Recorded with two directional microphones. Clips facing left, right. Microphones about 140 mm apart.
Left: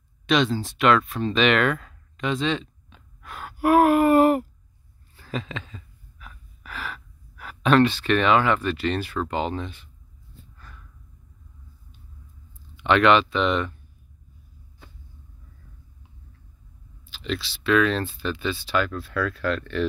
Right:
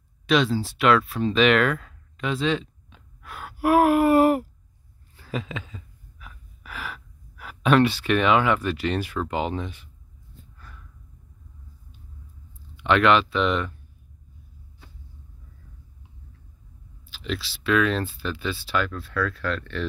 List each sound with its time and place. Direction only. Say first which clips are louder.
0.3 s speech: even; 5° right (ahead or behind)
5.1 s a sound: even; 10° right (ahead or behind)
12.7 s speech: left 1 dB; centre (ahead or behind)
17.1 s speech: left 1 dB; 5° right (ahead or behind)
19.1 s speech: left 1 dB; 10° left (ahead or behind)